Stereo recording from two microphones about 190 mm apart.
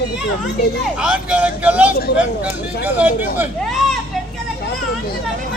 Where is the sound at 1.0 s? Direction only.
5° right (ahead or behind).